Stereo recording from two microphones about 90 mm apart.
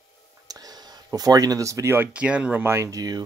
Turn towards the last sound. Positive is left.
turn(degrees=-45)  # may be behind; listen again after turning